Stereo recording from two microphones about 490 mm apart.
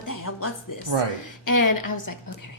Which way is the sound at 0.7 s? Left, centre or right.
Left.